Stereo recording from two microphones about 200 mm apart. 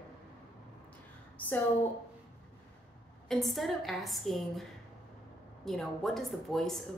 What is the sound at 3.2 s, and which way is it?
Speech, centre (ahead or behind).